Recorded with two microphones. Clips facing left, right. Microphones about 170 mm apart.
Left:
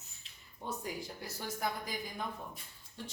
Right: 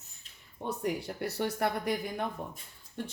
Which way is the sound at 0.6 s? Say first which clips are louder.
Right 7 dB; 65° right (ahead or behind).